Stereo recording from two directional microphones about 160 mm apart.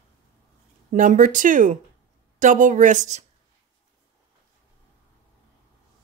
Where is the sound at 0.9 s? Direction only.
55° right (ahead or behind).